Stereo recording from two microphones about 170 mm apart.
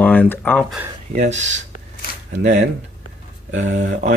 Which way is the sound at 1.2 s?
45° right (ahead or behind).